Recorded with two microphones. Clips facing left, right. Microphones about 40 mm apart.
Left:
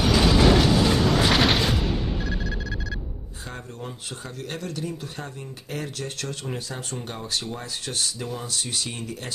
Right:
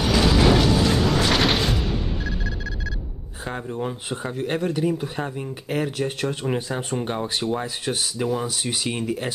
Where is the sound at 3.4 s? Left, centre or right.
Right.